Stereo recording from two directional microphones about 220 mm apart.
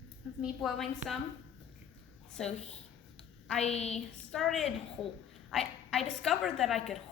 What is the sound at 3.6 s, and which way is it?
Speech, 30° left (ahead or behind).